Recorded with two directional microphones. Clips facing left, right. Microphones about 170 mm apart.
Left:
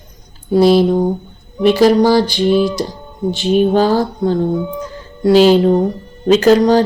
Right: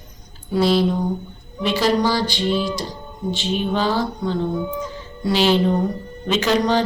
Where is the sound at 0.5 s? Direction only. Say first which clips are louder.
Left 8 dB; 45° left (ahead or behind).